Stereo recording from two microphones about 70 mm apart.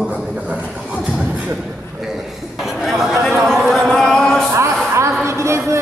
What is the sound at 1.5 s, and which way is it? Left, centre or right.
Chatter, centre.